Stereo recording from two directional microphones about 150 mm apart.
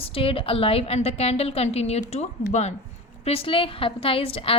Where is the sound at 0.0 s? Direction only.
40° left (ahead or behind).